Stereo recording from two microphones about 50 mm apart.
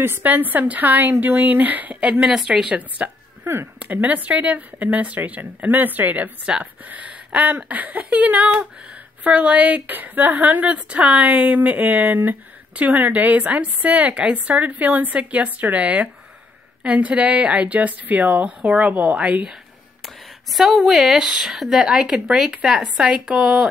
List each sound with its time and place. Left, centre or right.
0.2 s a woman's voice: right
2.0 s speech: right
2.3 s speech: centre
3.0 s speech: right
3.4 s speech: right
3.8 s a woman's voice: right
6.4 s a woman's voice: right
20.5 s speech: centre